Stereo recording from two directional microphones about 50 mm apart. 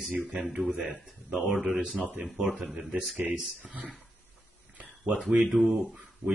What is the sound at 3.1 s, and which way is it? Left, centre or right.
Speech, right.